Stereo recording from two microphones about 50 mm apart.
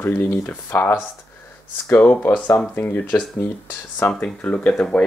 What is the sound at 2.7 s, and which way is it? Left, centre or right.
Speech, left.